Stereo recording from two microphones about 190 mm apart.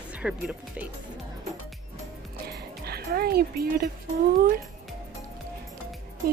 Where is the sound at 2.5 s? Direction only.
55° right (ahead or behind).